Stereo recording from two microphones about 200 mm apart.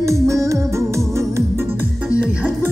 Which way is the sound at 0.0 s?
15° right (ahead or behind).